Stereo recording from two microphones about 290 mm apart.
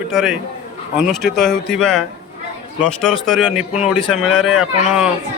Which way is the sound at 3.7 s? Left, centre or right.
Left.